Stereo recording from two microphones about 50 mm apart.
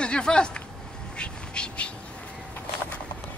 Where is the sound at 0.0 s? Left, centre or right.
Centre.